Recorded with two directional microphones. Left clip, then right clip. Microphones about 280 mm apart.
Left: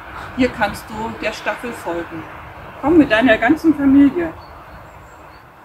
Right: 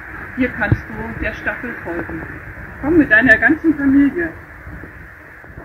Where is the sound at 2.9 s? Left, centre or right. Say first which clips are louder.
Right 2 dB; centre.